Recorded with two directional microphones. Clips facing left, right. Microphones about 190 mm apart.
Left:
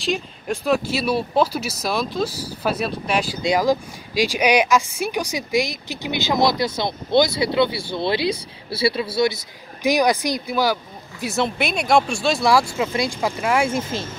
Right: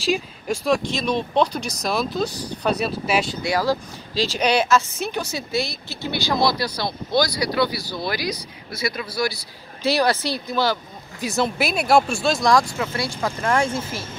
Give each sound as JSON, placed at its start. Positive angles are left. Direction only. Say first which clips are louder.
{"t": 0.0, "sound": "speech", "louder": "right 1 dB", "side_deg": 0}
{"t": 3.4, "sound": "speech", "louder": "left 3 dB", "side_deg": 15}
{"t": 12.7, "sound": "speech", "louder": "left 4 dB", "side_deg": 15}